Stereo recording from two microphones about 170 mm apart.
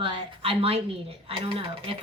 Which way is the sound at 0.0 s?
30° right (ahead or behind).